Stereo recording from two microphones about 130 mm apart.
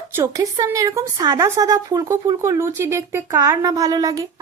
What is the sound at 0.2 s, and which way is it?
A woman's voice, 30° right (ahead or behind).